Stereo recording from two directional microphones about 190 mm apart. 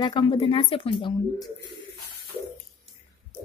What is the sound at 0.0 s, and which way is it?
A woman's voice, 25° left (ahead or behind).